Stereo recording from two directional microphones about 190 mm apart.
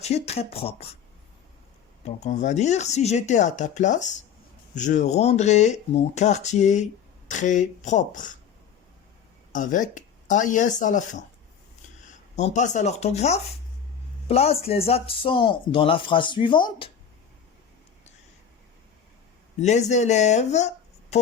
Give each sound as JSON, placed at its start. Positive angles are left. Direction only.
{"t": 0.0, "sound": "speech", "side_deg": 35}
{"t": 2.0, "sound": "speech", "side_deg": 40}
{"t": 9.5, "sound": "speech", "side_deg": 45}
{"t": 12.4, "sound": "speech", "side_deg": 40}
{"t": 19.5, "sound": "speech", "side_deg": 35}